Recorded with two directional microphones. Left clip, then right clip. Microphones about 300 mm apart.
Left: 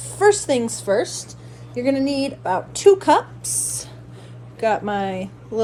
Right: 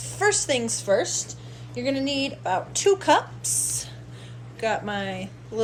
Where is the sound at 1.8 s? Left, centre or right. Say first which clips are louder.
Left 5 dB; left.